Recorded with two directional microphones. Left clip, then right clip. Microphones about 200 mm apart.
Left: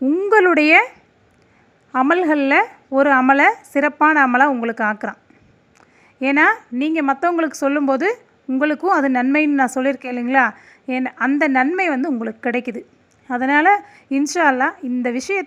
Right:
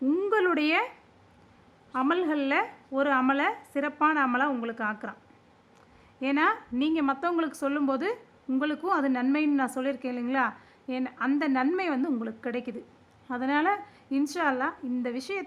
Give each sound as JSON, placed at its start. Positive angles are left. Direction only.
{"t": 0.0, "sound": "a sound", "side_deg": 15}
{"t": 0.3, "sound": "speech", "side_deg": 25}
{"t": 1.9, "sound": "a woman's voice", "side_deg": 25}
{"t": 6.1, "sound": "a woman's voice", "side_deg": 25}